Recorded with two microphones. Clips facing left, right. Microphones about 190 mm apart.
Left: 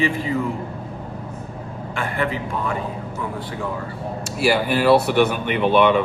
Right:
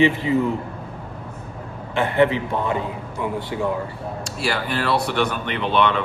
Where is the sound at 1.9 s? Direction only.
20° right (ahead or behind).